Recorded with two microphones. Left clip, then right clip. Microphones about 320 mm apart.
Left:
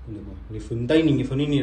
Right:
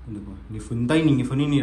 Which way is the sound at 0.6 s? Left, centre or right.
Centre.